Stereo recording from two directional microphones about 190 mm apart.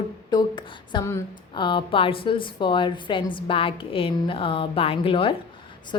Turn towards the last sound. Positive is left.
turn(degrees=30)  # may be behind; listen again after turning